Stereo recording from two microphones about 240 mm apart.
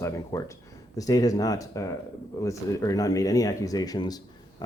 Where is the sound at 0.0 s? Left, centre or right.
Centre.